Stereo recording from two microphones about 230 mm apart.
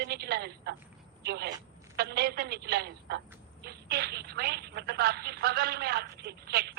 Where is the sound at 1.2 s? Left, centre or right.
Right.